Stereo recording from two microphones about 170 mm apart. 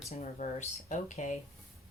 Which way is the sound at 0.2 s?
45° left (ahead or behind).